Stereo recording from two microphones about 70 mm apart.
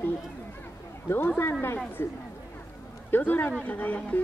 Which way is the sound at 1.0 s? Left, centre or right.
Left.